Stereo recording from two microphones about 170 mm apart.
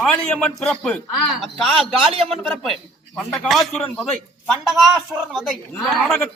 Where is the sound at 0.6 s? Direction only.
5° left (ahead or behind).